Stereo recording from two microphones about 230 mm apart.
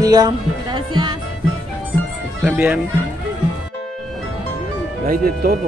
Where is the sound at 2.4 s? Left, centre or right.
Centre.